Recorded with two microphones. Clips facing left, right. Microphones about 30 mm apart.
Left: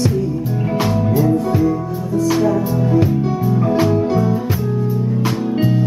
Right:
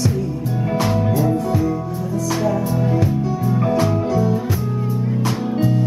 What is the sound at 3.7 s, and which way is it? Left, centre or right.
Music, centre.